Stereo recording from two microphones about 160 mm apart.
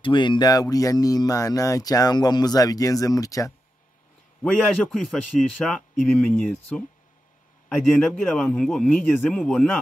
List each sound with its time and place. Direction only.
0.0 s speech: 30° left (ahead or behind)
4.4 s a man's voice: 5° left (ahead or behind)